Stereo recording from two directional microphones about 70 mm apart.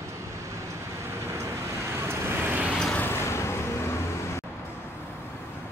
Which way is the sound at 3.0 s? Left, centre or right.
Left.